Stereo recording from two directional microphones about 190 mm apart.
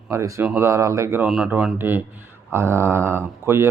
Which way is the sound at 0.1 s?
15° right (ahead or behind).